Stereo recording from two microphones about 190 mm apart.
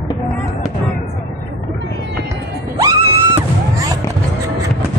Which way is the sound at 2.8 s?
15° right (ahead or behind).